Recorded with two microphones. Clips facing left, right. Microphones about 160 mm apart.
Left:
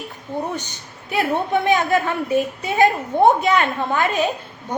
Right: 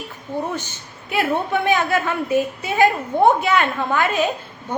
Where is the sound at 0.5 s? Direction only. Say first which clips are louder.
Even; 15° left (ahead or behind).